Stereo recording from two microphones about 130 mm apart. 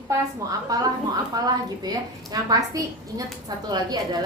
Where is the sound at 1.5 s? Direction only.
30° right (ahead or behind).